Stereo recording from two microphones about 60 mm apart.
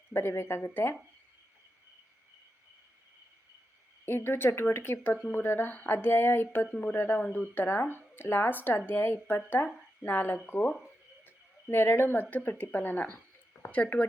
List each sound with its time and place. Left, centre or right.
0.1 s speech: left
4.0 s speech: left
7.2 s speech: left
7.5 s speech: left
11.7 s speech: left